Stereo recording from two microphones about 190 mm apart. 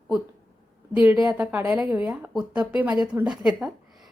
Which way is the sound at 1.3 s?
5° right (ahead or behind).